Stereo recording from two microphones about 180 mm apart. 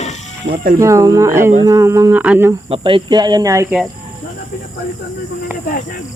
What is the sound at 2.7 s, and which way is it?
Speech, 30° right (ahead or behind).